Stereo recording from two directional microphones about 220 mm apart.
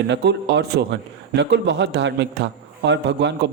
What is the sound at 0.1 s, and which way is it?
A man's voice, 50° right (ahead or behind).